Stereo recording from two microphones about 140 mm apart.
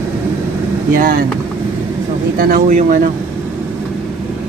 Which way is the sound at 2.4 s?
80° right.